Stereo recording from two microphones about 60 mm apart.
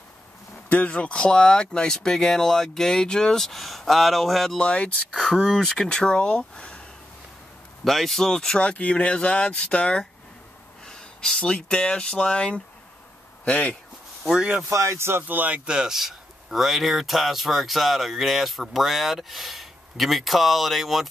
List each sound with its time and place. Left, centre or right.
0.7 s speech: left; by 4.6 s centre
4.6 s speech: centre
5.1 s speech: centre
7.8 s speech: centre
10.9 s a sound: centre
11.5 s speech: centre
14.4 s speech: centre
14.7 s speech: right
15.2 s speech: right
15.6 s speech: centre